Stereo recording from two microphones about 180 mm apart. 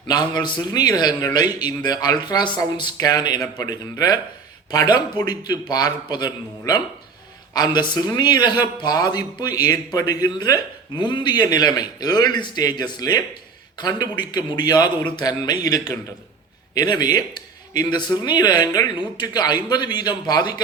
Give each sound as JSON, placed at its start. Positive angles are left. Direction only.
{"t": 0.1, "sound": "speech", "side_deg": 25}